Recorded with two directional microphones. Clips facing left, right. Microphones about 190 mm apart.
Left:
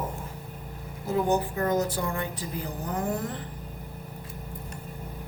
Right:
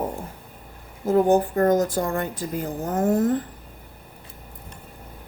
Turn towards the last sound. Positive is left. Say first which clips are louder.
# right 9 dB
turn(degrees=-45)  # may be behind; listen again after turning